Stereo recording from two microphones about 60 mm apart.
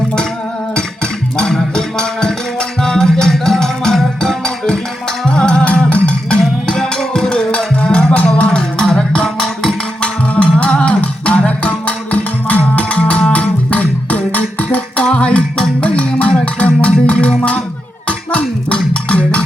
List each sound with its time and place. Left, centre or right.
1.4 s music: centre
10.3 s music: left
18.3 s a sound: left
18.8 s music: centre